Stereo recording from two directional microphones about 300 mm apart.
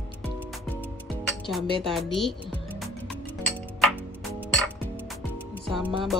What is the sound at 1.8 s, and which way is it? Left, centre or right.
Speech, centre.